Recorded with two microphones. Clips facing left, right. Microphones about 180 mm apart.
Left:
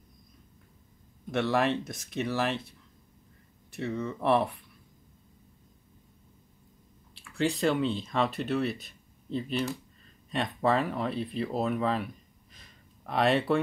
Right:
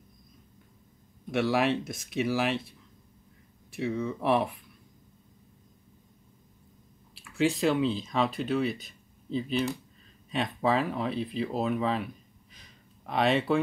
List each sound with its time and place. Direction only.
1.3 s speech: centre (ahead or behind)
3.7 s speech: centre (ahead or behind)
7.2 s speech: centre (ahead or behind)
12.5 s a sound: centre (ahead or behind)